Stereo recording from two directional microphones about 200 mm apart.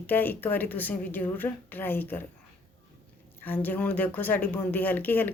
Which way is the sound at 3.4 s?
10° left (ahead or behind).